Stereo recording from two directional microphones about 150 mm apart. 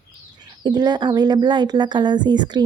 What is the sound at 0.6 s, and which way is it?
Speech, 30° right (ahead or behind).